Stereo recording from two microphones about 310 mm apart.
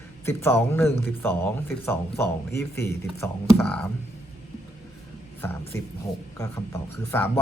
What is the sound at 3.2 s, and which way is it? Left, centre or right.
Speech, centre.